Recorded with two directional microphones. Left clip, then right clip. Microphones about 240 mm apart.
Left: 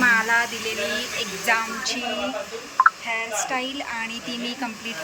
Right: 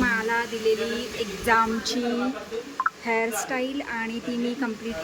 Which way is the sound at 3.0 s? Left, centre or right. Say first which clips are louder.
Right 1 dB; centre.